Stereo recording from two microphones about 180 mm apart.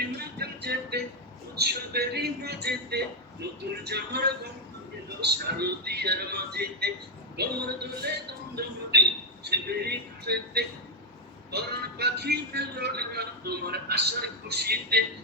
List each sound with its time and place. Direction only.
0.2 s music: 60° right (ahead or behind)
1.5 s a man's voice: 65° right (ahead or behind)